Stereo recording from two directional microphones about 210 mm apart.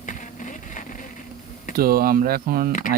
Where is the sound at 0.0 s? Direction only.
35° left (ahead or behind).